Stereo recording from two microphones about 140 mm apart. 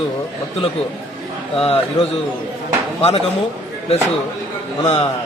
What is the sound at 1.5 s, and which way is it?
Speech, 40° left (ahead or behind).